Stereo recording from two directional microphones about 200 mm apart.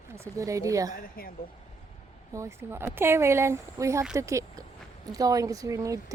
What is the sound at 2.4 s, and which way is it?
Speech, 15° right (ahead or behind).